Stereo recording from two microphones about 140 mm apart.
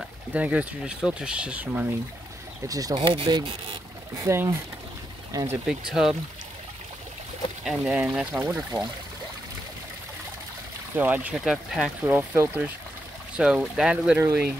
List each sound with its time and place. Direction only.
0.3 s speech: 10° right (ahead or behind)
2.7 s speech: 30° right (ahead or behind)
4.2 s speech: 20° right (ahead or behind)
5.7 s speech: 5° right (ahead or behind)
7.6 s speech: 5° right (ahead or behind)
11.0 s speech: 10° right (ahead or behind)
12.1 s speech: 15° right (ahead or behind)